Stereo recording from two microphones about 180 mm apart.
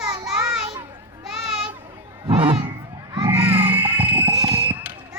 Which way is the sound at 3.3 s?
10° right (ahead or behind).